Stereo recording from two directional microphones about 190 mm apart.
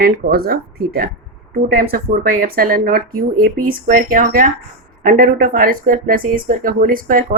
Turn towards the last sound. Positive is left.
turn(degrees=-50)  # may be behind; listen again after turning